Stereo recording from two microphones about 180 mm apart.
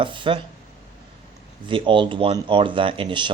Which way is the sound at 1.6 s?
25° right (ahead or behind).